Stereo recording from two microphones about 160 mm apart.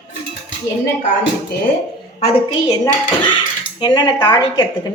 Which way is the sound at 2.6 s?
25° left (ahead or behind).